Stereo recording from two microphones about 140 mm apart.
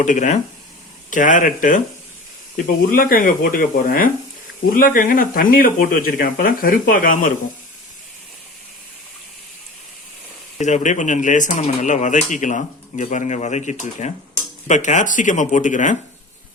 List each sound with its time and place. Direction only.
0.0 s speech: 60° left (ahead or behind)
2.6 s speech: 80° left
10.6 s speech: 60° left (ahead or behind)